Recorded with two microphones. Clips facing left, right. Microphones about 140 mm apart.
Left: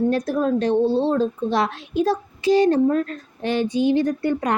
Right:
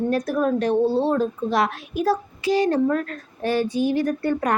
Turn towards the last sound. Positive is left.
turn(degrees=20)  # may be behind; listen again after turning